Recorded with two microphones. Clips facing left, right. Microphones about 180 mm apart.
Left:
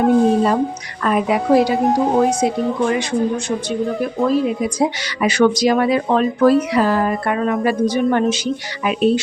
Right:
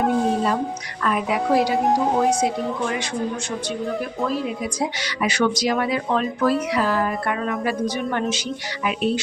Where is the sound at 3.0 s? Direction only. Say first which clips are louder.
Left 7 dB; 20° left (ahead or behind).